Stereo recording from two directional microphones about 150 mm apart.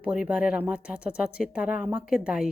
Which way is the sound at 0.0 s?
10° right (ahead or behind).